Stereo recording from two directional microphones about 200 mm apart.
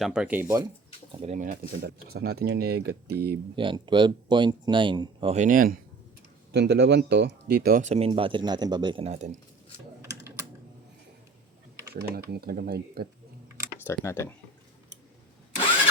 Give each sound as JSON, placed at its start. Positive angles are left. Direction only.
{"t": 0.0, "sound": "speech", "side_deg": -5}
{"t": 1.2, "sound": "speech", "side_deg": -35}
{"t": 3.5, "sound": "speech", "side_deg": -25}
{"t": 6.5, "sound": "speech", "side_deg": -55}
{"t": 11.9, "sound": "speech", "side_deg": -50}
{"t": 13.8, "sound": "speech", "side_deg": 10}